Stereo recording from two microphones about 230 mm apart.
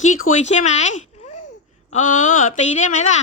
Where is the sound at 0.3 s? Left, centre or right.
Left.